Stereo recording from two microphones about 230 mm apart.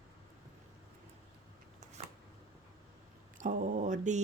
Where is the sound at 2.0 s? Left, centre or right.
Right.